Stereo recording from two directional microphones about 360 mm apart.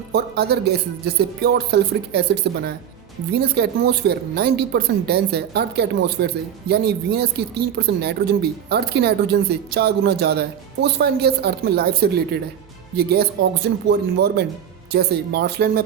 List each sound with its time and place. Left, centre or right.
0.1 s speech: right
14.9 s speech: right